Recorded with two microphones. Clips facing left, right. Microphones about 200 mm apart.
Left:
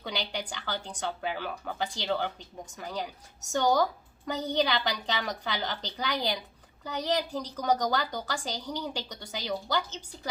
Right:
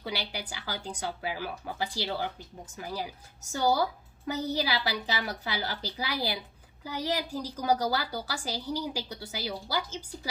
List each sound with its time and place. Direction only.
0.0 s a woman's voice: 5° right (ahead or behind)